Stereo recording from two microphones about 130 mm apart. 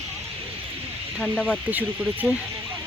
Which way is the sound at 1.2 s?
5° left (ahead or behind).